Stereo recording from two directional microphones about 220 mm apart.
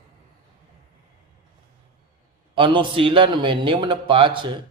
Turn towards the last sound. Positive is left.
turn(degrees=-20)  # may be behind; listen again after turning